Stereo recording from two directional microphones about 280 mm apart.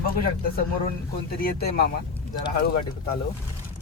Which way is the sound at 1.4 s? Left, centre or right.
Left.